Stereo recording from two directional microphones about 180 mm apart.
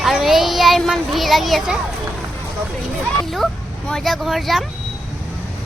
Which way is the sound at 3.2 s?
Centre (ahead or behind).